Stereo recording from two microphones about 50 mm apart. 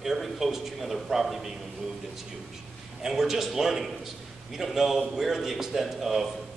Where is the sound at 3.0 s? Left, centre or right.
Centre.